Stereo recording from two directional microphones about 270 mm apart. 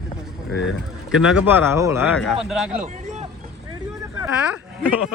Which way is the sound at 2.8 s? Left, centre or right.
Right.